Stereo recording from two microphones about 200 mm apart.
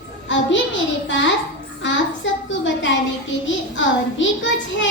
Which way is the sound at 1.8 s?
65° left (ahead or behind).